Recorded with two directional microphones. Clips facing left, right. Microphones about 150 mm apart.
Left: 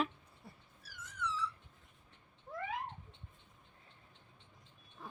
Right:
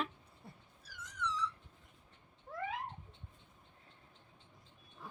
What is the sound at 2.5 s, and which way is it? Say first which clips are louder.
Cat: left 1 dB; 10° left (ahead or behind).